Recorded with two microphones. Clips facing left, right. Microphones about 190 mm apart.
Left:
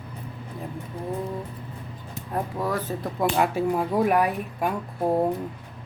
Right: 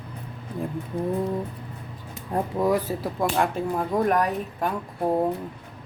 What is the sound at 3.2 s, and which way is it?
A man's voice, 5° left (ahead or behind).